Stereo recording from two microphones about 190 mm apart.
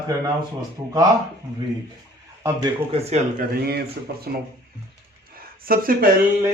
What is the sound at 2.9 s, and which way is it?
Speech, 35° right (ahead or behind).